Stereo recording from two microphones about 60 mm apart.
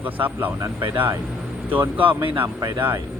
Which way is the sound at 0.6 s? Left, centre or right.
Right.